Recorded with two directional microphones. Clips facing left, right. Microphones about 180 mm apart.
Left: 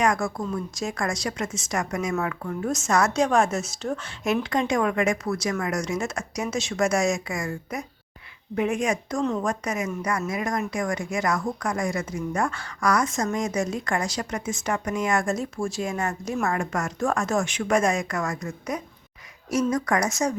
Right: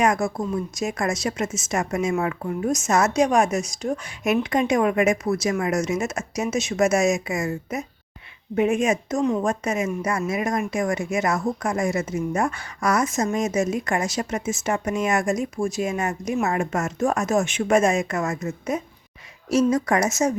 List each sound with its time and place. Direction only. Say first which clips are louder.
0.0 s speech: right 3 dB; 20° right (ahead or behind)